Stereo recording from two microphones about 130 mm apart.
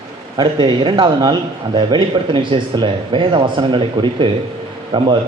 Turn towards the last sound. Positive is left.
turn(degrees=-40)  # may be behind; listen again after turning